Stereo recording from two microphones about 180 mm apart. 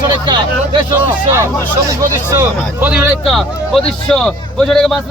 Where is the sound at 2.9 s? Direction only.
Centre (ahead or behind).